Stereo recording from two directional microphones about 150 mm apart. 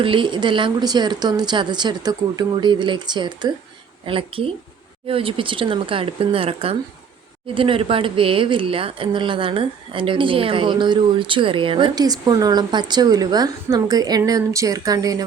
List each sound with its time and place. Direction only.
0.0 s speech: 35° right (ahead or behind)